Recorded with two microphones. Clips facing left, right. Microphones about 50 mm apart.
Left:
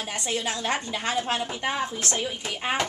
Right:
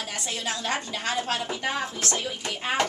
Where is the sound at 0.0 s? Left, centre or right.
Centre.